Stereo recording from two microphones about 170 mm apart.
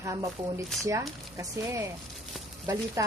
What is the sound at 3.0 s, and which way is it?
Speech, 15° right (ahead or behind).